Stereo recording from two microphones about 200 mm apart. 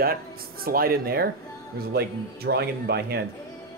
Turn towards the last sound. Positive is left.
turn(degrees=-55)  # may be behind; listen again after turning